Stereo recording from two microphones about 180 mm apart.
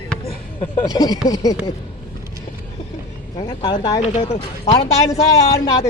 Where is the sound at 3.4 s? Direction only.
25° left (ahead or behind).